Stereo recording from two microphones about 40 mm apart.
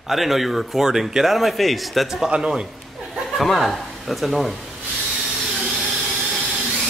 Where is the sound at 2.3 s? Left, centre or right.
Centre.